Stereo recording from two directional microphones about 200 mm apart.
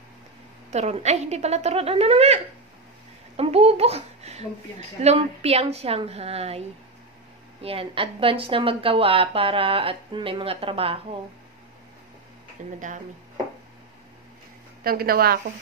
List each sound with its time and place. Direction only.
0.7 s a child's voice: 35° right (ahead or behind)
7.6 s a woman's voice: 25° right (ahead or behind)
12.7 s a child's voice: 40° right (ahead or behind)
14.8 s a woman's voice: 50° right (ahead or behind)